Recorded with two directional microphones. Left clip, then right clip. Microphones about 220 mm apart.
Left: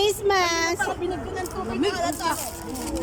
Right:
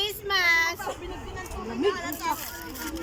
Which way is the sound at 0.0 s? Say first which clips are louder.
Left 4 dB; 55° left (ahead or behind).